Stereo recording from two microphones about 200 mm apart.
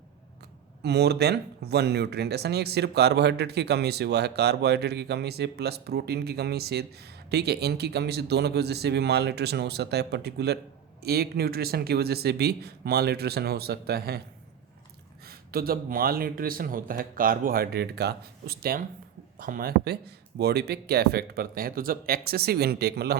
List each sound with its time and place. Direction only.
0.8 s speech: 55° right (ahead or behind)
15.2 s speech: 50° right (ahead or behind)